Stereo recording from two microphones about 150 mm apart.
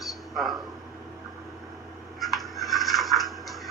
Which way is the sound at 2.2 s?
Centre (ahead or behind).